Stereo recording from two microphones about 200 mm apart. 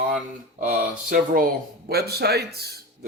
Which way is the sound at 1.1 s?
45° right (ahead or behind).